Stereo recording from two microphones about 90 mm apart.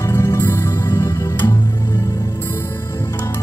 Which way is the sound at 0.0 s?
30° left (ahead or behind).